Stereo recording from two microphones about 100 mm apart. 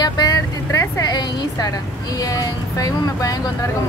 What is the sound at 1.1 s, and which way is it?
Speech, 45° left (ahead or behind).